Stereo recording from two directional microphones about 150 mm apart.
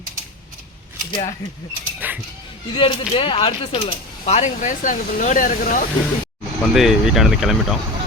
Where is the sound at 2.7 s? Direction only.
35° left (ahead or behind); by 5.9 s 60° left (ahead or behind).